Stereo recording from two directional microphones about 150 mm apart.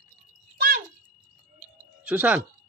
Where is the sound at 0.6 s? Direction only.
85° right.